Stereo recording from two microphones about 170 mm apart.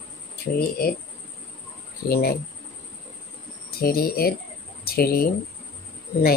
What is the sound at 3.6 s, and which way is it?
Speech, 60° left (ahead or behind).